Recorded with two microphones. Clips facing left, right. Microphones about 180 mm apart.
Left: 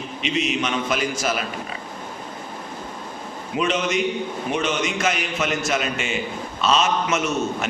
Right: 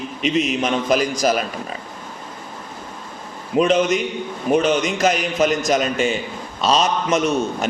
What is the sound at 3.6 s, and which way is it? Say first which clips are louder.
A man's voice: right 6 dB; 40° right (ahead or behind).